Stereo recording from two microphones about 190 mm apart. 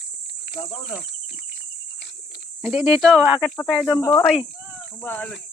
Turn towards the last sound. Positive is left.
turn(degrees=10)  # may be behind; listen again after turning